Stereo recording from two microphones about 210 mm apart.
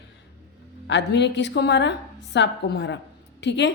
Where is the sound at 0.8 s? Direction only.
55° left (ahead or behind).